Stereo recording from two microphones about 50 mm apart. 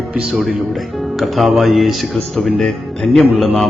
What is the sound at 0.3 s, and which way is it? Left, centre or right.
Speech, centre.